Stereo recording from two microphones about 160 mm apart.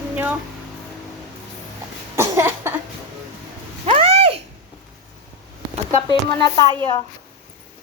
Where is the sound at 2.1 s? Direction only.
15° right (ahead or behind).